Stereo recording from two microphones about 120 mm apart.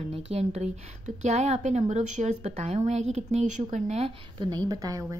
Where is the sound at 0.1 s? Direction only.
60° right (ahead or behind); by 4.1 s 80° right.